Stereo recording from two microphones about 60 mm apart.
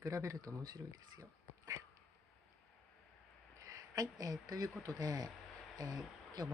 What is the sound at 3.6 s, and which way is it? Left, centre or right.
Speech, right.